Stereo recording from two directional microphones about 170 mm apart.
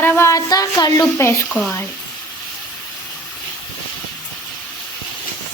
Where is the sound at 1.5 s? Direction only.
Centre (ahead or behind).